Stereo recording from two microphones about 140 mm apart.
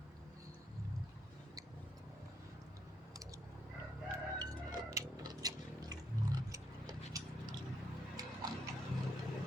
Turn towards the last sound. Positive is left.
turn(degrees=-25)  # may be behind; listen again after turning